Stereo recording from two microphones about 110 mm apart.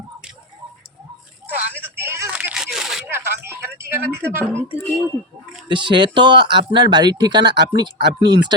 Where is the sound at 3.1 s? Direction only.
20° right (ahead or behind).